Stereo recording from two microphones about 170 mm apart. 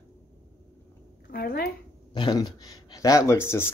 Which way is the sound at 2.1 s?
25° left (ahead or behind).